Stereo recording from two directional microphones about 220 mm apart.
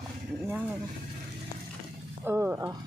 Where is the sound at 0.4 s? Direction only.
5° right (ahead or behind).